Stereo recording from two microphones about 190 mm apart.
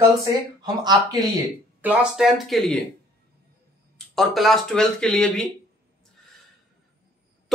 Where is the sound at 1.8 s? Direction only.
5° right (ahead or behind).